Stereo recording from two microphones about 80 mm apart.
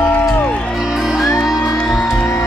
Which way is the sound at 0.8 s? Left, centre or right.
Centre.